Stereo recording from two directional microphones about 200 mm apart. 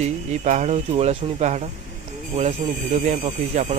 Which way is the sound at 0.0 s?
35° right (ahead or behind).